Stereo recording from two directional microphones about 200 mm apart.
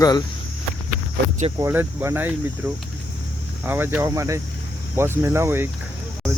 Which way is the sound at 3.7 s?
10° right (ahead or behind).